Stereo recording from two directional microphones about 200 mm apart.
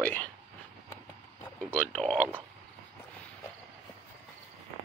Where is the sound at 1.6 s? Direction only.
5° left (ahead or behind).